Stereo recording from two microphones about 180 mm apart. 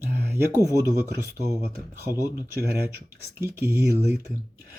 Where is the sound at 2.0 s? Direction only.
15° right (ahead or behind).